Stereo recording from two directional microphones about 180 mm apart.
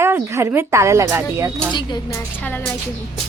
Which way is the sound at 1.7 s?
25° left (ahead or behind).